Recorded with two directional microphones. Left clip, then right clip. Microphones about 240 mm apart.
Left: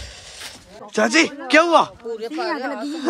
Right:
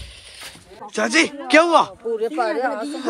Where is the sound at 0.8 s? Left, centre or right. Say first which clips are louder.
Left 1 dB; centre.